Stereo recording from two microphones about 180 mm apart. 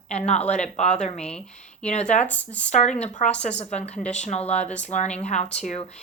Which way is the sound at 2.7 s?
40° left (ahead or behind).